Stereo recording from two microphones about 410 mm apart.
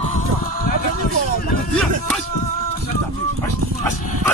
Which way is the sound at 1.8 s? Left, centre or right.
Centre.